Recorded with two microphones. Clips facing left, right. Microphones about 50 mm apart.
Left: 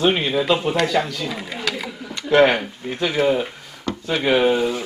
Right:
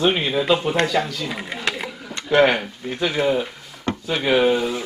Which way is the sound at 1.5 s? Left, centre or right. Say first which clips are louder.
Even; right.